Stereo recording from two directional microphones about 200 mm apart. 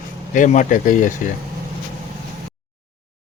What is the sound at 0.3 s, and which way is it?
Speech, 40° left (ahead or behind).